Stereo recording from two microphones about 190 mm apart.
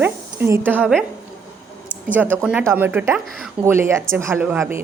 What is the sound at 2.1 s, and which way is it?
A woman's voice, 10° right (ahead or behind).